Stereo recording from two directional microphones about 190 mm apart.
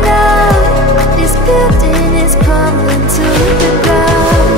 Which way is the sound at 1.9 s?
Centre (ahead or behind).